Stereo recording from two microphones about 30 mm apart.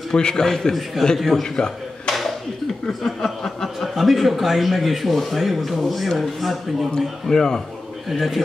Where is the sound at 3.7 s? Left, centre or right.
Centre.